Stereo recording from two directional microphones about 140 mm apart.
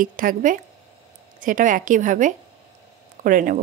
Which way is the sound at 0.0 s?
75° right (ahead or behind).